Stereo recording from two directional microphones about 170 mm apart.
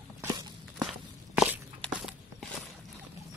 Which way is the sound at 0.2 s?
20° right (ahead or behind).